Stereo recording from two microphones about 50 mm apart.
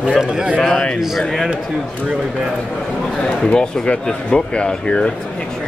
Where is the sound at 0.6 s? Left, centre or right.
Centre.